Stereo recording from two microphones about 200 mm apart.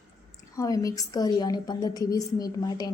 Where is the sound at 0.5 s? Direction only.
15° left (ahead or behind).